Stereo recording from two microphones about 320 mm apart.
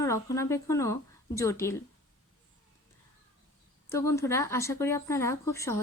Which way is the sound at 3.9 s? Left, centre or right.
Centre.